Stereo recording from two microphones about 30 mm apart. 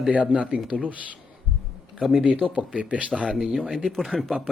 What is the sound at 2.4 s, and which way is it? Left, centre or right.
Speech, right.